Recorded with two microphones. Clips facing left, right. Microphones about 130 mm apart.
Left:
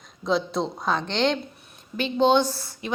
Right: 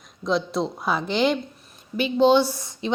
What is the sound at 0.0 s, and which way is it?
A woman's voice, centre (ahead or behind).